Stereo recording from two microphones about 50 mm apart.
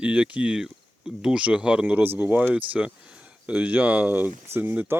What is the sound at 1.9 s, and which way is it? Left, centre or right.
Speech, right.